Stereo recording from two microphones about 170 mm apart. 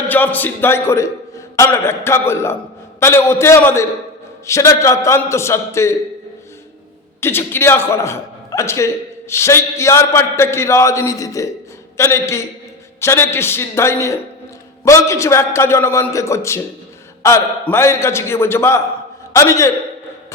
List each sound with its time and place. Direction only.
0.1 s a man's voice: 10° left (ahead or behind)
7.2 s a man's voice: 15° left (ahead or behind)